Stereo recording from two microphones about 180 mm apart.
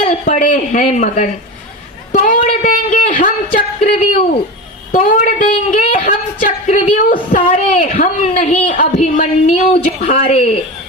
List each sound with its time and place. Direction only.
0.1 s a woman's voice: 45° left (ahead or behind)